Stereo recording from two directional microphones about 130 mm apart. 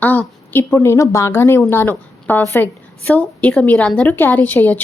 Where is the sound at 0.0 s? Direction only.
15° left (ahead or behind).